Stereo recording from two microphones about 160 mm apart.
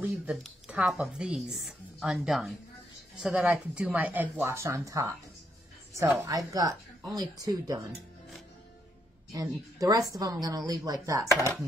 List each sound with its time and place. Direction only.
0.0 s a woman's voice: 10° right (ahead or behind)
9.8 s a woman's voice: 20° right (ahead or behind)